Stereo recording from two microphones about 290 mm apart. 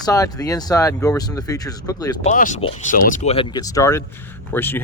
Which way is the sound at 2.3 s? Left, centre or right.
Left.